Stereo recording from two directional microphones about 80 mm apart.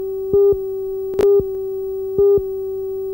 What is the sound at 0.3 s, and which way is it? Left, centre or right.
Busy signal, centre.